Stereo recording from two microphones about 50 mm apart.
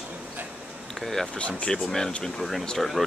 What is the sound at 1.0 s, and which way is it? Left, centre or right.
Speech, centre.